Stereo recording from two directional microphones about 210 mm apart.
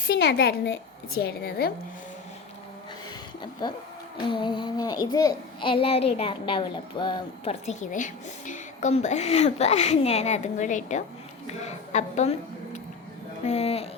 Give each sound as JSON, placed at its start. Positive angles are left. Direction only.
{"t": 0.1, "sound": "a woman's voice", "side_deg": 55}
{"t": 3.6, "sound": "a child's voice", "side_deg": 20}
{"t": 7.6, "sound": "a woman's voice", "side_deg": 35}
{"t": 13.4, "sound": "a child's voice", "side_deg": 30}